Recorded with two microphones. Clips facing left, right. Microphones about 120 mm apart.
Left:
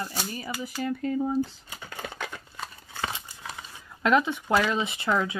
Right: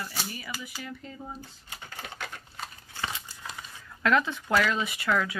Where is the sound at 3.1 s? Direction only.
20° left (ahead or behind).